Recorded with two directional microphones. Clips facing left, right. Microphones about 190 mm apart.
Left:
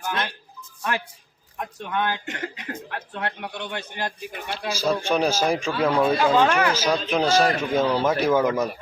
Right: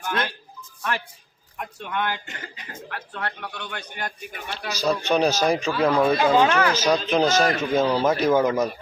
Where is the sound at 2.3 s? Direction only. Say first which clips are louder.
Left 8 dB; 70° left (ahead or behind).